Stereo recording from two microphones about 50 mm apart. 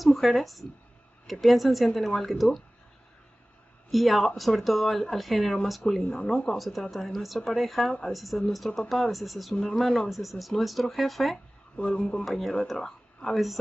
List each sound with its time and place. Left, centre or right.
0.0 s speech: centre
3.9 s speech: centre
11.7 s speech: centre
12.3 s speech: centre